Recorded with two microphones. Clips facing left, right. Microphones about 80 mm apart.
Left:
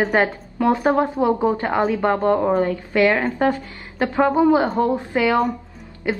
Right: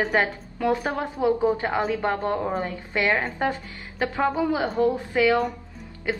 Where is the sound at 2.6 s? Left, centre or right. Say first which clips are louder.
Left 8 dB; right.